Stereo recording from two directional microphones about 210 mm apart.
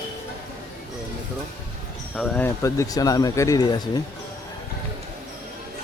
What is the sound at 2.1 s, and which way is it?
Speech, 5° left (ahead or behind).